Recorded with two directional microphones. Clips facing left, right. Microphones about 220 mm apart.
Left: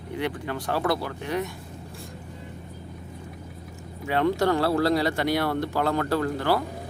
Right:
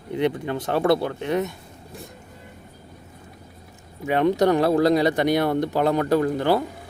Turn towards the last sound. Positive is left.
turn(degrees=-20)  # may be behind; listen again after turning